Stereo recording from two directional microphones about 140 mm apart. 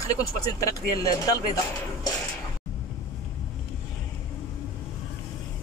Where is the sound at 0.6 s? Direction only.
25° left (ahead or behind).